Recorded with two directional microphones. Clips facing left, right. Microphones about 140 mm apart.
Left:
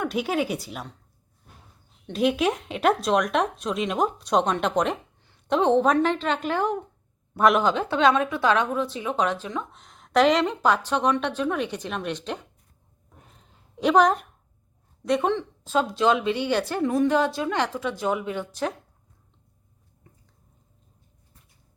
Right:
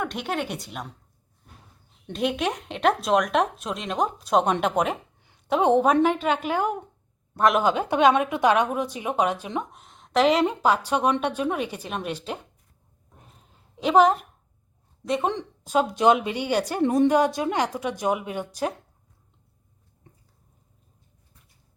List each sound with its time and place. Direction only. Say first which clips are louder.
0.0 s speech: left 3 dB; 5° left (ahead or behind)
2.1 s speech: left 3 dB; centre (ahead or behind)
4.6 s a sound: even; 5° right (ahead or behind)
5.5 s a woman's voice: even; 10° right (ahead or behind)
7.3 s speech: left 1 dB; centre (ahead or behind)
7.6 s a woman's voice: right 1 dB; 10° right (ahead or behind)
9.8 s a woman's voice: left 1 dB; centre (ahead or behind)
13.7 s speech: right 1 dB; centre (ahead or behind)
15.3 s a woman's voice: left 1 dB; 15° right (ahead or behind)
16.8 s a woman's voice: right 4 dB; 25° right (ahead or behind)
17.1 s a woman's voice: right 2 dB; 15° right (ahead or behind)